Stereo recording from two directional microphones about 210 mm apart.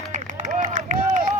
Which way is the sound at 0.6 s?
35° right (ahead or behind).